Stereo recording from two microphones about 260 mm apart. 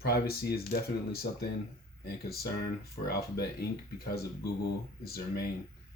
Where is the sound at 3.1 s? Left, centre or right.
Left.